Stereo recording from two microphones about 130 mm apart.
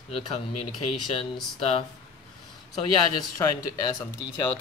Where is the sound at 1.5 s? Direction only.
50° left (ahead or behind).